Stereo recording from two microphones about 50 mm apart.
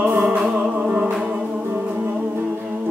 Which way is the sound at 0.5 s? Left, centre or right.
Right.